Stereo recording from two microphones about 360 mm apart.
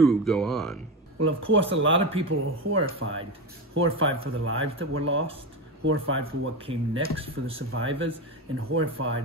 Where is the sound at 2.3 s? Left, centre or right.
Right.